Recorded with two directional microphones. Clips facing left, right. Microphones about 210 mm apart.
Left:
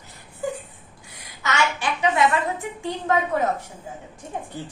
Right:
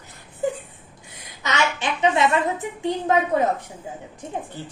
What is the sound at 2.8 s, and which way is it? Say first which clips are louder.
Speech: right 3 dB; 20° right (ahead or behind).